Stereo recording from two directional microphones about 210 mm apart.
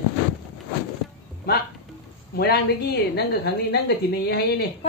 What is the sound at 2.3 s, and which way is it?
Speech, 50° left (ahead or behind).